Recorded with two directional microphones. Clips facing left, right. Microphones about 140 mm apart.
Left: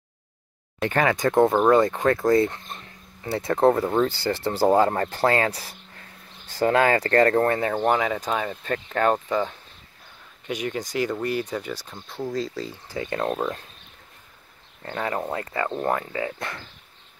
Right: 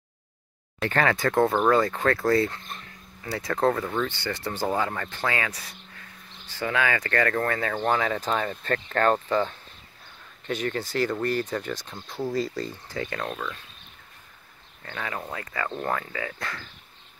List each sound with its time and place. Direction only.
0.7 s speech: 15° left (ahead or behind)
7.7 s speech: 15° left (ahead or behind)
12.9 s speech: 25° left (ahead or behind)
13.3 s speech: 40° left (ahead or behind)
14.8 s speech: 30° left (ahead or behind)